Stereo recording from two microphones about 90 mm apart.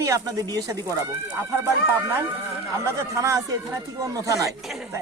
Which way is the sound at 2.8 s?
35° right (ahead or behind).